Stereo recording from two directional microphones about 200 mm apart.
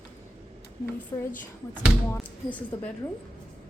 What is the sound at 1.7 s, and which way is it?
Speech, 5° right (ahead or behind).